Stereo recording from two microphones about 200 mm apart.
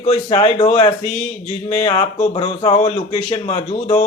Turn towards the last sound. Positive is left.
turn(degrees=35)  # may be behind; listen again after turning